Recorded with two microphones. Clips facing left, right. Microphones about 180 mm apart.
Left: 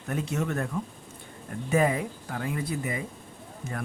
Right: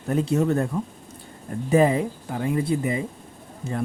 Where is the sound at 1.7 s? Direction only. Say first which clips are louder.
Right 6 dB; 30° right (ahead or behind).